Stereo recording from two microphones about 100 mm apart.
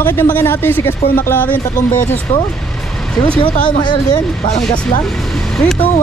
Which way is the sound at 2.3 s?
90° left.